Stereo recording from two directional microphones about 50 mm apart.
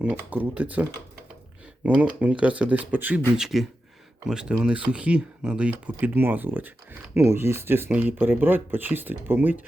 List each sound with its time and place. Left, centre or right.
0.3 s speech: right
3.3 s speech: centre; by 5.7 s right
5.8 s speech: right
7.2 s speech: right